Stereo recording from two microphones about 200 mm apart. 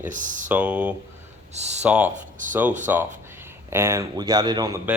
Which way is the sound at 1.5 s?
35° right (ahead or behind).